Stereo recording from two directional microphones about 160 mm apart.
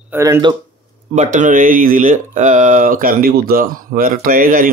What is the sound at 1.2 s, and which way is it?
Speech, 50° right (ahead or behind).